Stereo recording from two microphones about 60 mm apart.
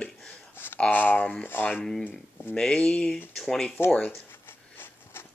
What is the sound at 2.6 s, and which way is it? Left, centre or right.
Speech, centre.